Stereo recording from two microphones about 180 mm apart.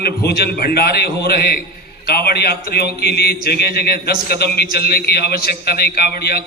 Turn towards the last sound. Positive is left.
turn(degrees=60)  # may be behind; listen again after turning